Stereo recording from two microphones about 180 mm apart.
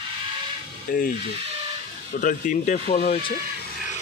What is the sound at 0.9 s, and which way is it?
Speech, 50° left (ahead or behind).